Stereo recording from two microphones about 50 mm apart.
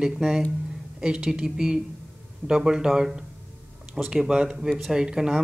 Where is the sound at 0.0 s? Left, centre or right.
Centre.